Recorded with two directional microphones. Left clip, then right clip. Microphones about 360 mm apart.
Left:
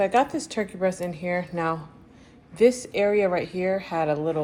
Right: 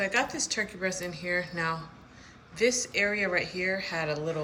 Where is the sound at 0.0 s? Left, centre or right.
Centre.